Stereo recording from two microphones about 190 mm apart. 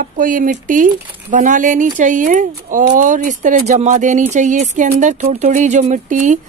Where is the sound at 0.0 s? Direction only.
45° right (ahead or behind).